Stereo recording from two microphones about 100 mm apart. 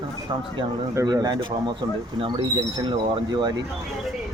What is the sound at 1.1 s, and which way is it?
Speech, 40° right (ahead or behind).